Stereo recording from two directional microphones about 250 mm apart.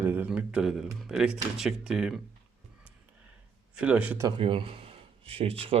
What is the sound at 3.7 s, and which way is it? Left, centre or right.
Speech, centre.